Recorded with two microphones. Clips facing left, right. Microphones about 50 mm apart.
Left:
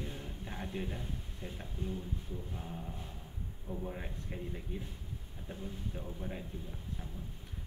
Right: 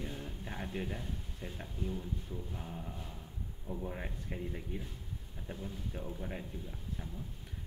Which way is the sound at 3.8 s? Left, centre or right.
Centre.